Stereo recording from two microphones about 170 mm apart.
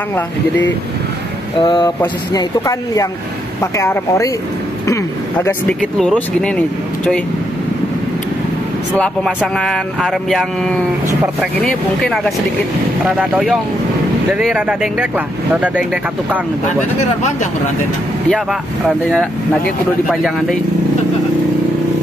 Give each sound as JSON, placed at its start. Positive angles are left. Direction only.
{"t": 1.6, "sound": "speech", "side_deg": 25}
{"t": 5.4, "sound": "speech", "side_deg": 5}
{"t": 8.9, "sound": "speech", "side_deg": 5}
{"t": 20.1, "sound": "speech", "side_deg": 0}